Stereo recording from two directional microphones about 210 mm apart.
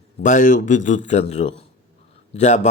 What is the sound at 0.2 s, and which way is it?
A man's voice, 35° left (ahead or behind).